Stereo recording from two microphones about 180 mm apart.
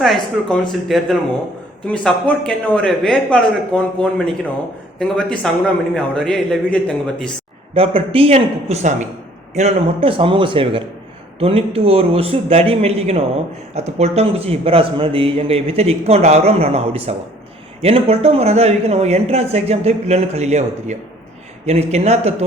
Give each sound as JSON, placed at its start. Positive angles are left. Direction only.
{"t": 0.0, "sound": "a man's voice", "side_deg": 0}
{"t": 7.7, "sound": "a man's voice", "side_deg": -30}